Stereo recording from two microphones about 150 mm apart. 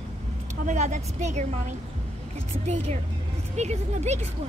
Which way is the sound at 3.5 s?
50° right (ahead or behind).